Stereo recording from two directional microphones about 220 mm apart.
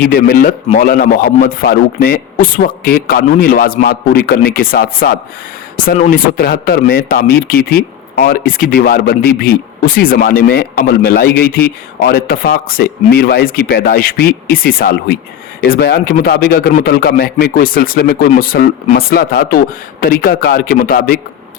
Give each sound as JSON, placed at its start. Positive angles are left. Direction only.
{"t": 0.0, "sound": "speech", "side_deg": 40}